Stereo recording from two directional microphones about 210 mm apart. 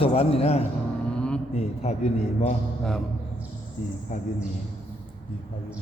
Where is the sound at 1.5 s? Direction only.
30° left (ahead or behind).